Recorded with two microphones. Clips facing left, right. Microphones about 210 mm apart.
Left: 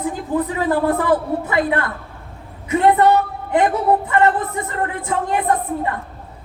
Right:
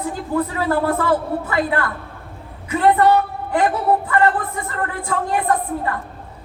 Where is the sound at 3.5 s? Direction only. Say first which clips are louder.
Left 2 dB; 20° left (ahead or behind).